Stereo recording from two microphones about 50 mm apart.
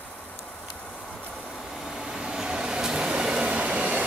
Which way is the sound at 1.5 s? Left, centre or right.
Centre.